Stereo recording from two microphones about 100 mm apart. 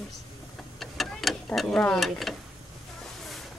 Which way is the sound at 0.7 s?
Centre (ahead or behind).